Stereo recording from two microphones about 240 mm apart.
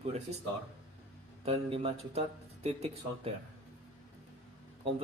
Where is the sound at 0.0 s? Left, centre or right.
Right.